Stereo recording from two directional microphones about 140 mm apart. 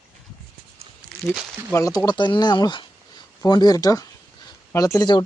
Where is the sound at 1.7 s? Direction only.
25° left (ahead or behind).